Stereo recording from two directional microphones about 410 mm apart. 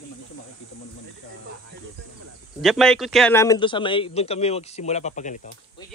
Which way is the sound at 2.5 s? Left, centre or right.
Centre.